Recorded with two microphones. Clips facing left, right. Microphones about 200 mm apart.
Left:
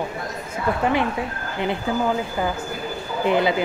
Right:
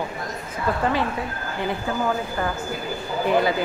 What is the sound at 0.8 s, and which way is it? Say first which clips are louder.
Speech: left 2 dB; 20° left (ahead or behind).